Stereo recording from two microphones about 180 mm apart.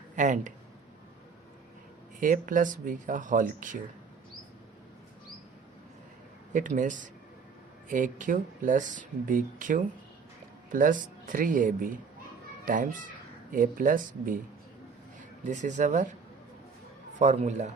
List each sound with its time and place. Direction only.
0.2 s speech: 45° right (ahead or behind)
2.2 s speech: 50° right (ahead or behind)
6.5 s speech: 45° right (ahead or behind)
17.2 s a man's voice: 40° right (ahead or behind)